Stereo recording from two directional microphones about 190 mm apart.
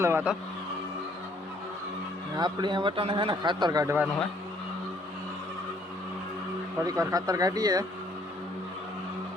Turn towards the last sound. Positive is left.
turn(degrees=-20)  # may be behind; listen again after turning